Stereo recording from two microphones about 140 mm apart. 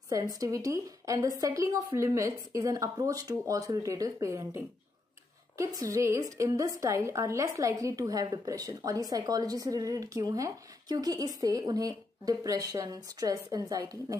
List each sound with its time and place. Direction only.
0.1 s a woman's voice: 25° right (ahead or behind)